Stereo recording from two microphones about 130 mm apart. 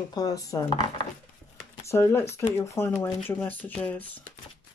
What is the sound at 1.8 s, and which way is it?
Speech, 20° left (ahead or behind).